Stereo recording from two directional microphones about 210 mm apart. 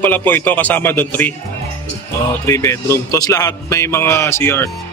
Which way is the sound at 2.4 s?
15° left (ahead or behind).